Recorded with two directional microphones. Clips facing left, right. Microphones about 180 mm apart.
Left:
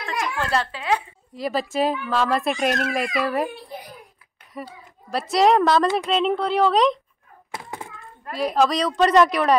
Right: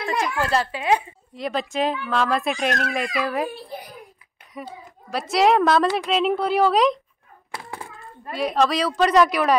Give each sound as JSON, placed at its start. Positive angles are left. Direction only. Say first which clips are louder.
{"t": 0.4, "sound": "speech", "louder": "right 2 dB", "side_deg": -5}
{"t": 1.3, "sound": "a woman's voice", "louder": "left 1 dB", "side_deg": 0}
{"t": 4.6, "sound": "a woman's voice", "louder": "even", "side_deg": 0}
{"t": 7.5, "sound": "a sound", "louder": "left 1 dB", "side_deg": 20}
{"t": 8.3, "sound": "a woman's voice", "louder": "left 1 dB", "side_deg": 0}